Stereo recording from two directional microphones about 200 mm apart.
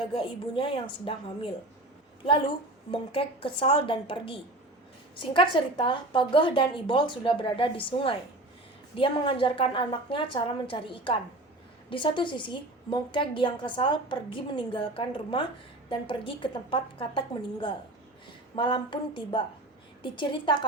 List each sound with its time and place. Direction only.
0.1 s a woman's voice: 25° left (ahead or behind)
2.9 s a woman's voice: 25° left (ahead or behind)